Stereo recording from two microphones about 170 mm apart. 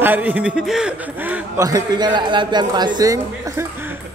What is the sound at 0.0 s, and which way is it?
A man's voice, 10° right (ahead or behind).